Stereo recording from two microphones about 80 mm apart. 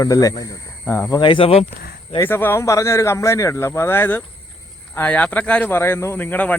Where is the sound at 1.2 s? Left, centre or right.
Left.